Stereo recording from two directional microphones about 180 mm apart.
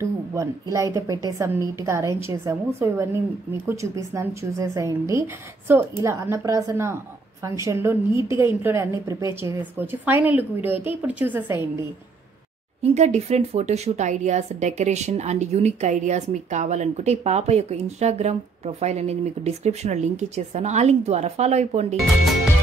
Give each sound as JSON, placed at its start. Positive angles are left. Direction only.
{"t": 0.0, "sound": "a woman's voice", "side_deg": -15}
{"t": 12.8, "sound": "a woman's voice", "side_deg": -40}
{"t": 21.9, "sound": "speech", "side_deg": 0}